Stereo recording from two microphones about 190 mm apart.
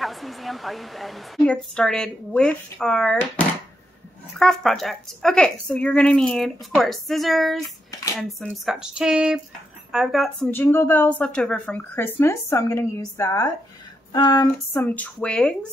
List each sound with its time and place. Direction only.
0.0 s speech: centre (ahead or behind)
10.5 s speech: 10° left (ahead or behind)
14.1 s female singing: 20° left (ahead or behind)
14.7 s speech: 10° left (ahead or behind)